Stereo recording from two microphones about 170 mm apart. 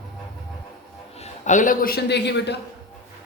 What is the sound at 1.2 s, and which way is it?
A man's voice, 45° left (ahead or behind).